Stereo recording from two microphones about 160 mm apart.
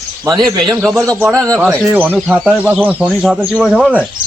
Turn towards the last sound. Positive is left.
turn(degrees=-5)  # may be behind; listen again after turning